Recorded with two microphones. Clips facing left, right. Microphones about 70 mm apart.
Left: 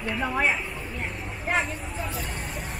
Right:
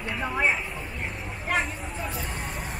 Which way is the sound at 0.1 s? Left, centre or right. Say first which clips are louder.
Left 2 dB; centre.